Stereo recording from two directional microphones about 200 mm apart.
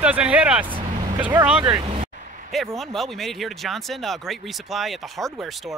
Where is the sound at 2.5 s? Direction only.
Centre (ahead or behind).